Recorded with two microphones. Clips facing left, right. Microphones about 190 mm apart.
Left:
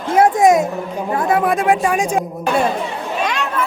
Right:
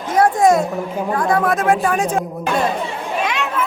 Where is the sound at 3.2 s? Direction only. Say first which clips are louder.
Left 2 dB; centre (ahead or behind).